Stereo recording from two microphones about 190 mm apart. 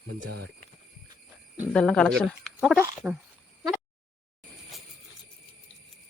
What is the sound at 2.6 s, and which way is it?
Speech, 10° right (ahead or behind).